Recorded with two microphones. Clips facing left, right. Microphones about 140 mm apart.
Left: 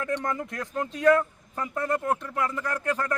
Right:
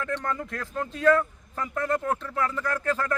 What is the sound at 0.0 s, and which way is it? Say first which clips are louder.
Speech: left 1 dB; 15° left (ahead or behind).